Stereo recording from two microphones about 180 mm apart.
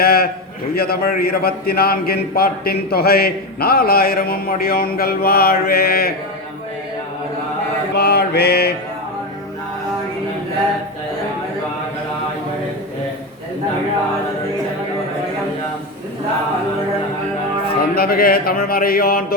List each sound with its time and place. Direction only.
0.0 s a man's voice: 55° left (ahead or behind)
7.9 s mantra: 65° left (ahead or behind)
17.7 s a man's voice: 55° left (ahead or behind)